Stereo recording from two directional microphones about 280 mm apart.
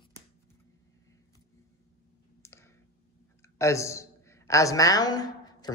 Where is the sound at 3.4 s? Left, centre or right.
Centre.